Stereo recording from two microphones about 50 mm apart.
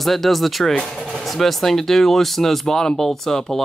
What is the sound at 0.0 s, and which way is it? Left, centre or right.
Speech, centre.